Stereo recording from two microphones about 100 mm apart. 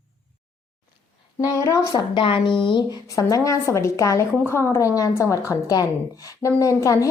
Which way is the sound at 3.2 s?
35° left (ahead or behind).